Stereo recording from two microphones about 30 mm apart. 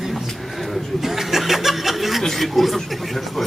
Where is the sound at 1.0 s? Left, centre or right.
Centre.